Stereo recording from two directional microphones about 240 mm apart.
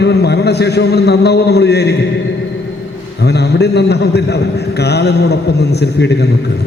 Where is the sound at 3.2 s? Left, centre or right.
Left.